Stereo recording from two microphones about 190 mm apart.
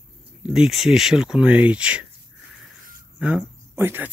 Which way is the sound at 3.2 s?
5° right (ahead or behind).